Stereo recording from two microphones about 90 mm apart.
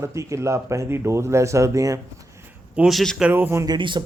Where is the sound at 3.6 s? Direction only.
55° right (ahead or behind).